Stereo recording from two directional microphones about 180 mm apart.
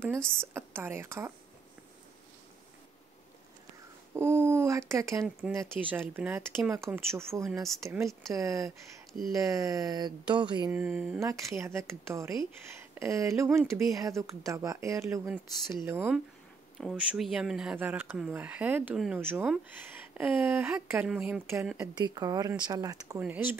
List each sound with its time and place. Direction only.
0.3 s speech: 15° right (ahead or behind)
4.1 s speech: 15° right (ahead or behind)
5.2 s speech: centre (ahead or behind)
5.6 s speech: 10° right (ahead or behind)
10.7 s speech: 10° right (ahead or behind)
11.1 s speech: 15° right (ahead or behind)
21.9 s speech: 25° right (ahead or behind)
23.2 s speech: 10° right (ahead or behind)